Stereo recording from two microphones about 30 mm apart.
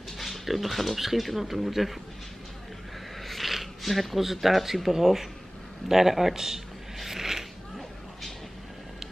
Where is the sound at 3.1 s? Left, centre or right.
Centre.